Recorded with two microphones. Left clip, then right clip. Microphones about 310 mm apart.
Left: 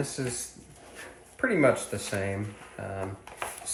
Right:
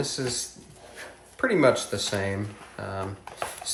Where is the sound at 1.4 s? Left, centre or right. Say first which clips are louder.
Right 3 dB; centre.